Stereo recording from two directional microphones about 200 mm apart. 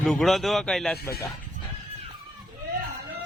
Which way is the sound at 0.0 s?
5° left (ahead or behind).